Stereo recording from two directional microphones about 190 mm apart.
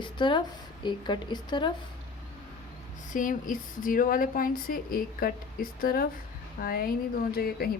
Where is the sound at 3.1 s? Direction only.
45° left (ahead or behind).